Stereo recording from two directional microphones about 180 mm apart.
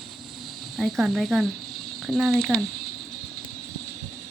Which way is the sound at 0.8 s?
Centre (ahead or behind).